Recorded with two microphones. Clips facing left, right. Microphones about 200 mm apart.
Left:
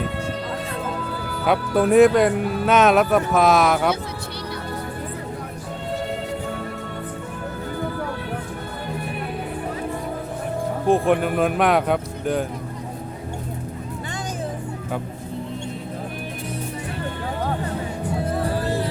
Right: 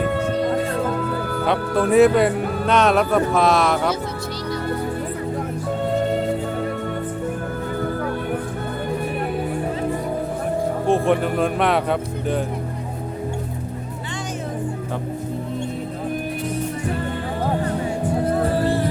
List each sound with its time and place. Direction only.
0.7 s music: 55° right (ahead or behind)
1.5 s speech: centre (ahead or behind)
10.8 s speech: centre (ahead or behind)